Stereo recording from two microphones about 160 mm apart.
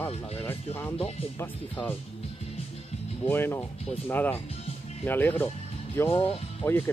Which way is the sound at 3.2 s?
15° left (ahead or behind).